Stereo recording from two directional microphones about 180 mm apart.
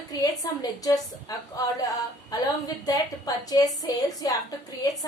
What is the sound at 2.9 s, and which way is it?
A woman's voice, 20° left (ahead or behind).